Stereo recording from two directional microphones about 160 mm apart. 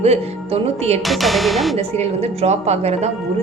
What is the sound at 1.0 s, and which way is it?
Speech, centre (ahead or behind).